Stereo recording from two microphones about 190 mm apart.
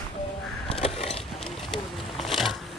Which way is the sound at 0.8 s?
30° left (ahead or behind).